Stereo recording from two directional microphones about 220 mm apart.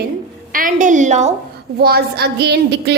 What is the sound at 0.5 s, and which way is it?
Speech, 35° right (ahead or behind).